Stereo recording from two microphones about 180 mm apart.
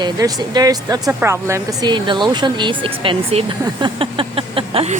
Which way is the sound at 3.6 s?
25° right (ahead or behind).